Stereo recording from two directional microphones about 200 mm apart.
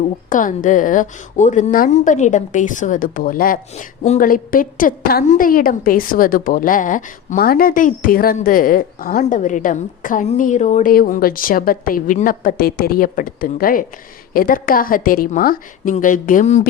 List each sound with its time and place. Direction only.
0.3 s a woman's voice: 40° left (ahead or behind)